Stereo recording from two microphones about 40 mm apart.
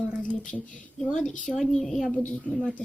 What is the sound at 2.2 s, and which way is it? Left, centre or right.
Speech, left.